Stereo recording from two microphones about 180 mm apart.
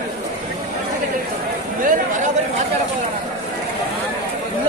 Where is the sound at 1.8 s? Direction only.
45° right (ahead or behind).